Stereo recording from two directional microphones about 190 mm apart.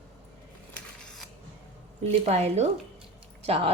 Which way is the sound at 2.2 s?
35° right (ahead or behind).